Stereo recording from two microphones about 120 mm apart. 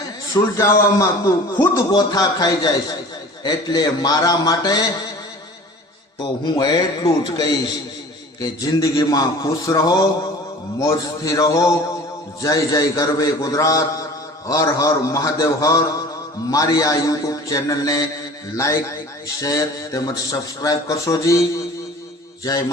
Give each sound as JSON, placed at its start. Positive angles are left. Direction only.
{"t": 0.5, "sound": "a man's voice", "side_deg": 25}
{"t": 1.9, "sound": "a man's voice", "side_deg": 35}
{"t": 6.4, "sound": "a man's voice", "side_deg": 35}